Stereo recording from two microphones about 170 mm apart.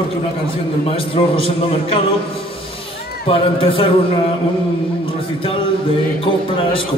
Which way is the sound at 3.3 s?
30° left (ahead or behind).